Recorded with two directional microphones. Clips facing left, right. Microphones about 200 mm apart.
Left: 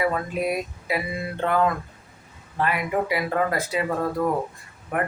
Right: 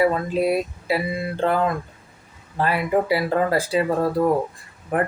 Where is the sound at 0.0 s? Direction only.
30° right (ahead or behind).